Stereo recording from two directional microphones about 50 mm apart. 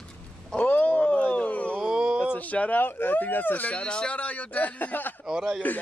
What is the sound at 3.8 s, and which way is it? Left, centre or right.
Speech, left.